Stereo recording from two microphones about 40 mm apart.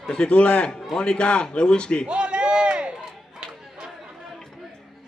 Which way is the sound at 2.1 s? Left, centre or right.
Right.